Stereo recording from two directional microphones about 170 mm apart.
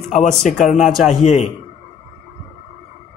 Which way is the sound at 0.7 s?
45° left (ahead or behind).